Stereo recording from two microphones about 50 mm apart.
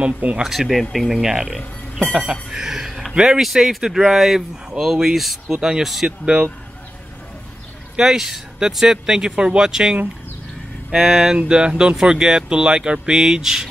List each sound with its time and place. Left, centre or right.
0.0 s speech: right
0.4 s speech: centre
2.9 s a sound: centre
3.2 s speech: centre
6.0 s speech: centre
7.9 s speech: centre